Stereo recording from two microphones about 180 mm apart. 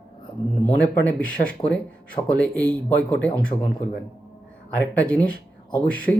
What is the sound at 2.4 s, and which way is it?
Speech, 5° left (ahead or behind).